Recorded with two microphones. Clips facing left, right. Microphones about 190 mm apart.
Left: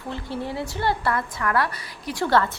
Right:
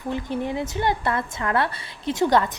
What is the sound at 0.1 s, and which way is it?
A woman's voice, 20° right (ahead or behind).